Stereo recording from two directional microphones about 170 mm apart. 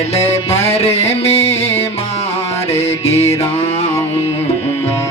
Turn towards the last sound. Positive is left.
turn(degrees=40)  # may be behind; listen again after turning